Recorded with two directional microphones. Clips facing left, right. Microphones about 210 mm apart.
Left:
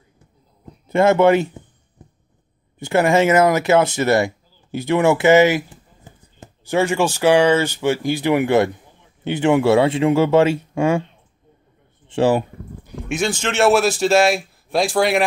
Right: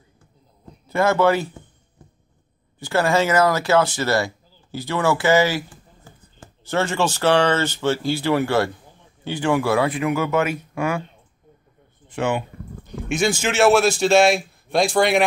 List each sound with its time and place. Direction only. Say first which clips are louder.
0.8 s speech: left 4 dB; 25° left (ahead or behind)
2.0 s a sound: left 3 dB; 20° left (ahead or behind)
2.8 s speech: left 4 dB; 20° left (ahead or behind)
12.1 s speech: left 6 dB; 35° left (ahead or behind)
12.8 s a sound: right 1 dB; 5° left (ahead or behind)
13.3 s a man's voice: even; 5° right (ahead or behind)